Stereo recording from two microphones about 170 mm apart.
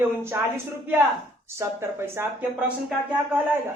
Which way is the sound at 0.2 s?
15° right (ahead or behind).